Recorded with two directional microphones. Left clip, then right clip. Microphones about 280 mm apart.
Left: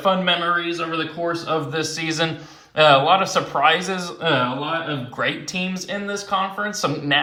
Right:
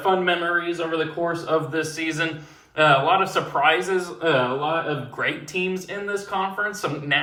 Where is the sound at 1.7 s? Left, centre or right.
Centre.